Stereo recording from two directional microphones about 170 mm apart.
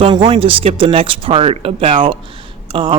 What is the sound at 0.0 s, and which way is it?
Speech, 30° right (ahead or behind).